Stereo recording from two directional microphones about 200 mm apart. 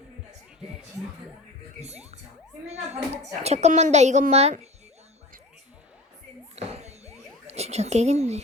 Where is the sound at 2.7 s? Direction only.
35° right (ahead or behind).